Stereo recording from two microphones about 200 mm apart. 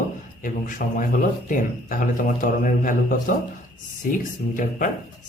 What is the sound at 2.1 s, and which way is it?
Speech, 40° left (ahead or behind).